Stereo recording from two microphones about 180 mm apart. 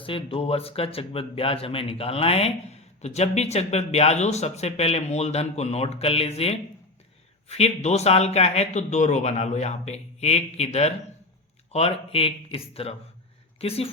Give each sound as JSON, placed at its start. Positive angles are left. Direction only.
{"t": 0.0, "sound": "speech", "side_deg": 30}